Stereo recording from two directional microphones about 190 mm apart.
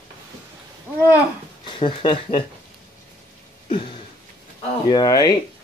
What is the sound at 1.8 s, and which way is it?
Speech, 25° left (ahead or behind).